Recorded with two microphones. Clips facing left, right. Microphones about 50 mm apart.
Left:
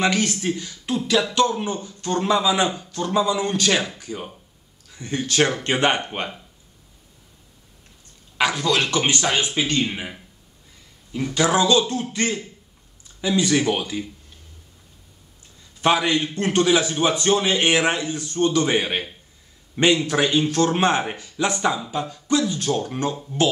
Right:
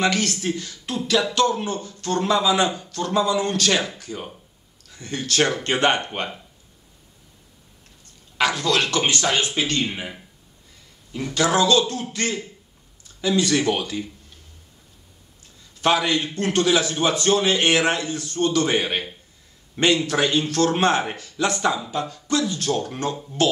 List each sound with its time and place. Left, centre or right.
0.0 s speech: centre
8.4 s speech: centre
11.3 s a man's voice: centre
15.8 s a man's voice: centre
18.8 s a man's voice: centre